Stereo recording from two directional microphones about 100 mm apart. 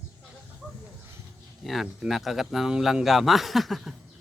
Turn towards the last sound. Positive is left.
turn(degrees=0)  # may be behind; listen again after turning